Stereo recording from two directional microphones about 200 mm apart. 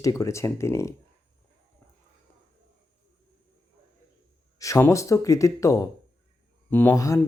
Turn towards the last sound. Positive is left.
turn(degrees=15)  # may be behind; listen again after turning